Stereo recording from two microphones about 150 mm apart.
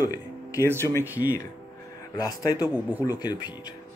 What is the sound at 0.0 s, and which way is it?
Music, 25° left (ahead or behind).